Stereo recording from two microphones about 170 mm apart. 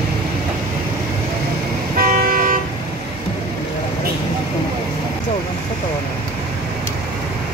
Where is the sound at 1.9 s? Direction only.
60° right (ahead or behind).